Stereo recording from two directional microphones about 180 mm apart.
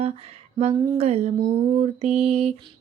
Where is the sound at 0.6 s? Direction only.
35° right (ahead or behind).